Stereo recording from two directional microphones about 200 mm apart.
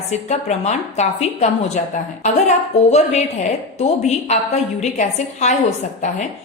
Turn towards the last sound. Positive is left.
turn(degrees=35)  # may be behind; listen again after turning